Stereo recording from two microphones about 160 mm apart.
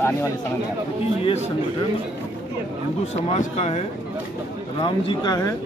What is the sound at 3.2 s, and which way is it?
Speech, 40° left (ahead or behind).